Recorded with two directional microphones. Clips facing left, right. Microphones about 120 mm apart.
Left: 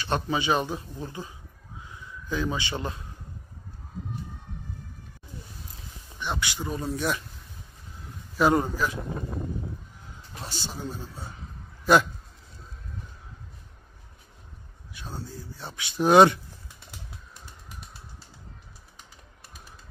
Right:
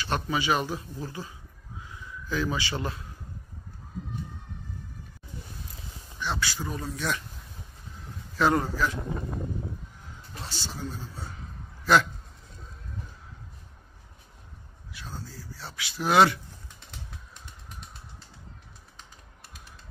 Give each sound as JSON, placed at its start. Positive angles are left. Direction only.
{"t": 0.0, "sound": "speech", "side_deg": 25}
{"t": 1.9, "sound": "a sound", "side_deg": 25}
{"t": 6.1, "sound": "speech", "side_deg": 20}
{"t": 8.4, "sound": "a man's voice", "side_deg": 15}
{"t": 10.4, "sound": "a man's voice", "side_deg": 15}
{"t": 15.0, "sound": "speech", "side_deg": 20}